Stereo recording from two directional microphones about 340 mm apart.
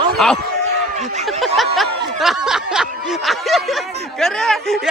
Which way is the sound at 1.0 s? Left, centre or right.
Centre.